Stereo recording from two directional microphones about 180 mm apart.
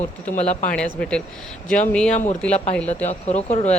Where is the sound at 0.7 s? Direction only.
5° left (ahead or behind).